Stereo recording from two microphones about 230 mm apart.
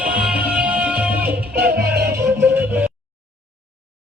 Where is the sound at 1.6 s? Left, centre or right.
Right.